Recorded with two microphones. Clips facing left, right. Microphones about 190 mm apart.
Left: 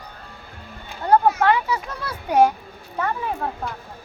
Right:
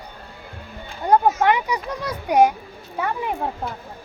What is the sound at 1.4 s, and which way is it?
A child's voice, 15° right (ahead or behind).